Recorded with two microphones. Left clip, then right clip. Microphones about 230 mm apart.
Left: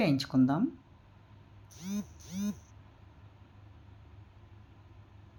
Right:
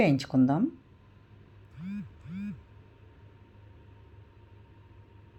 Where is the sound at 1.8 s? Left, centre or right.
Centre.